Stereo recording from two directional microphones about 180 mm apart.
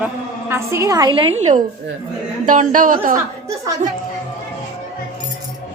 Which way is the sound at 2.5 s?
45° right (ahead or behind).